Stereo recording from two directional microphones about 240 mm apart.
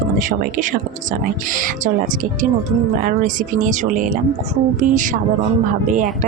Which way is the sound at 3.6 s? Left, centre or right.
Right.